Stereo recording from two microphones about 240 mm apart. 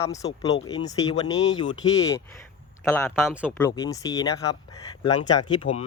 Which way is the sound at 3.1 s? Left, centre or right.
Centre.